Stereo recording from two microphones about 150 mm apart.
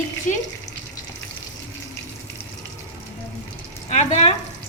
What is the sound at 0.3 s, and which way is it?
Speech, 60° left (ahead or behind).